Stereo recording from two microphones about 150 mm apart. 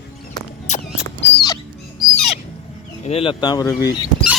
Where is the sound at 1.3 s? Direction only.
30° left (ahead or behind).